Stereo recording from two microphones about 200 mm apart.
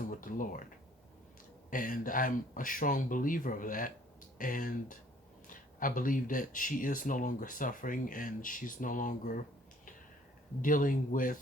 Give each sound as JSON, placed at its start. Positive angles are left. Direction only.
{"t": 0.1, "sound": "speech", "side_deg": 40}
{"t": 1.7, "sound": "speech", "side_deg": 40}
{"t": 10.6, "sound": "speech", "side_deg": 40}